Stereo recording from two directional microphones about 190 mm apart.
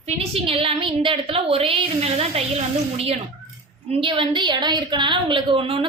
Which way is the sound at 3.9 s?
25° right (ahead or behind).